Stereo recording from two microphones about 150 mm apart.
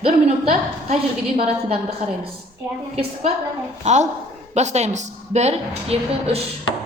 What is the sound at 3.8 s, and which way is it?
A woman's voice, 50° right (ahead or behind).